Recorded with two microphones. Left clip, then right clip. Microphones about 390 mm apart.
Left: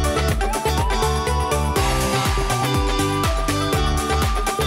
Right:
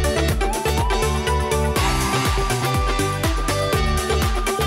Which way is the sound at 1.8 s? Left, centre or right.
Centre.